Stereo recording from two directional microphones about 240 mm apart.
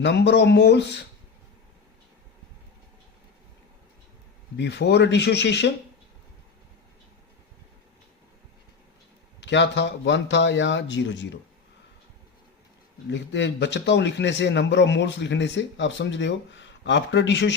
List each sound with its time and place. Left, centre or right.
0.0 s a man's voice: left
4.5 s a man's voice: left
9.4 s a man's voice: left
13.1 s a man's voice: left